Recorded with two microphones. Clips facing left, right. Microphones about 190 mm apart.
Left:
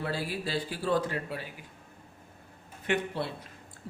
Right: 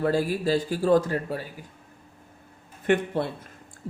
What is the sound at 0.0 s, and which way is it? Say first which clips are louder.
Speech: right 9 dB; 45° right (ahead or behind).